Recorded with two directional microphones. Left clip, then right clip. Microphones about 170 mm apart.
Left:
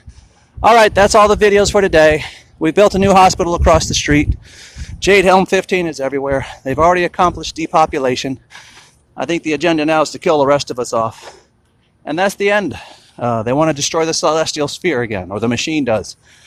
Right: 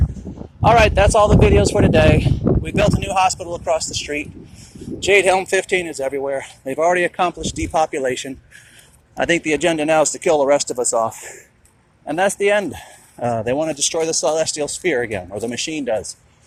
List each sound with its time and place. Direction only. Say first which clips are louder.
0.6 s speech: left 4 dB; 40° left (ahead or behind)
5.0 s speech: left 4 dB; 30° left (ahead or behind)
9.1 s speech: even; 10° left (ahead or behind)
9.6 s speech: left 3 dB; 30° left (ahead or behind)
12.0 s speech: left 2 dB; 30° left (ahead or behind)
12.7 s speech: left 4 dB; 20° left (ahead or behind)
13.6 s speech: left 5 dB; 40° left (ahead or behind)